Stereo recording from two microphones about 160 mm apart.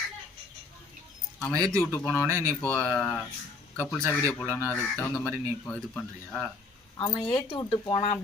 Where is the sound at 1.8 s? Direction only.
15° left (ahead or behind).